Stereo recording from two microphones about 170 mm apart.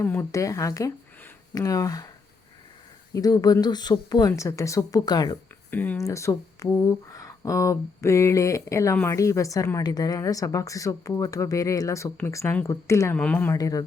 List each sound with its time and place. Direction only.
0.0 s speech: 10° left (ahead or behind)
3.1 s a woman's voice: 20° left (ahead or behind)
5.7 s a woman's voice: 10° left (ahead or behind)